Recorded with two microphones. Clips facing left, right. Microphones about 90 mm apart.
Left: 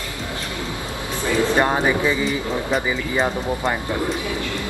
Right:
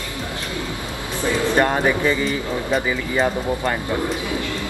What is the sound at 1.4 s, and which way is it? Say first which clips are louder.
Speech: even; 15° left (ahead or behind).